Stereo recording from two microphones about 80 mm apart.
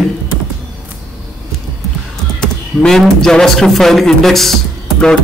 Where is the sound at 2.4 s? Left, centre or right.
Centre.